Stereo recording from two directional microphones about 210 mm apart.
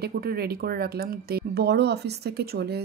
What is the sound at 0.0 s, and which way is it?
Speech, 45° right (ahead or behind).